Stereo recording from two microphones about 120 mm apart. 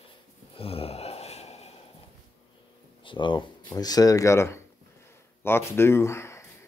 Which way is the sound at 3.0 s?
40° left (ahead or behind).